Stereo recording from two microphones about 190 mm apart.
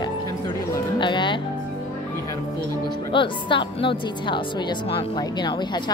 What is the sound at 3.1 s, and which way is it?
Speech, 25° left (ahead or behind).